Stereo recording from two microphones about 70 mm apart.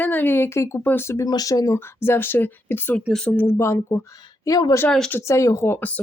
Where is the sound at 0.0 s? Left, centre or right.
Left.